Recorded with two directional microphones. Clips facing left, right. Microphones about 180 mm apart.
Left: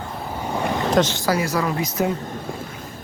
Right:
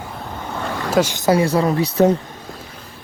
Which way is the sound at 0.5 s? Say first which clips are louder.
Left 3 dB; 15° left (ahead or behind).